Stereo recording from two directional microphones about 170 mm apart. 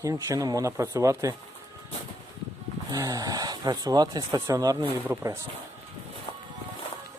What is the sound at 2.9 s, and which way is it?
Speech, 20° right (ahead or behind).